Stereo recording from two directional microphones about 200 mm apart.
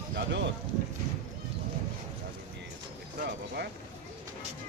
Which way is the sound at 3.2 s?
55° right (ahead or behind).